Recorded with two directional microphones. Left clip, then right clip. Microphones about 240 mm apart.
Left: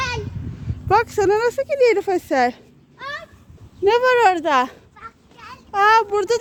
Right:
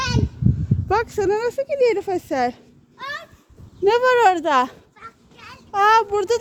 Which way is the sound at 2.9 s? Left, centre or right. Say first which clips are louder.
Even; right.